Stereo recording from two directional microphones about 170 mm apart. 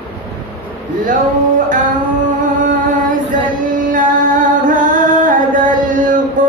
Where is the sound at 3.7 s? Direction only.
50° right (ahead or behind).